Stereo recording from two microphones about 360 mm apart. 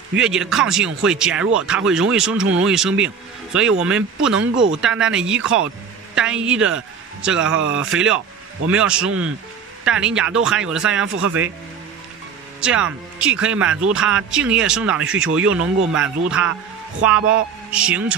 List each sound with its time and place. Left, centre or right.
0.1 s a man's voice: centre
7.4 s speech: right
7.7 s speech: centre
12.5 s speech: centre